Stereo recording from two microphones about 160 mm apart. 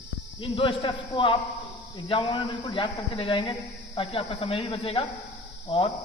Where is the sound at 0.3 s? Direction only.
35° left (ahead or behind).